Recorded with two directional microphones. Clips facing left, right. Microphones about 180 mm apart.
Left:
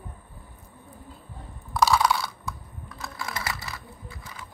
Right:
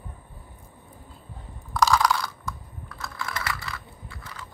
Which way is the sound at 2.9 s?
20° left (ahead or behind).